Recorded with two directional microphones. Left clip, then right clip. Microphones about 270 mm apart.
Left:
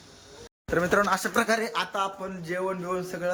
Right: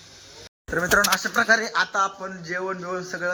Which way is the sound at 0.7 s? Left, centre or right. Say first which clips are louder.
Right 3 dB; centre.